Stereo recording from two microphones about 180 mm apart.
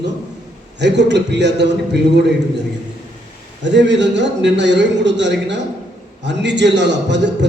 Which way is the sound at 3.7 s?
80° right.